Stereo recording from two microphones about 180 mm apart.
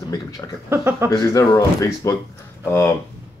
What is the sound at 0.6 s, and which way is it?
Speech, 10° right (ahead or behind).